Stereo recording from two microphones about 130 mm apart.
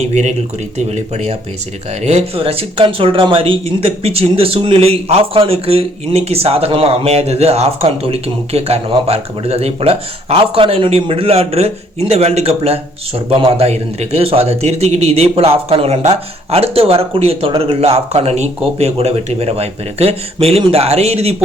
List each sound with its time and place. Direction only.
0.0 s speech: 60° right (ahead or behind)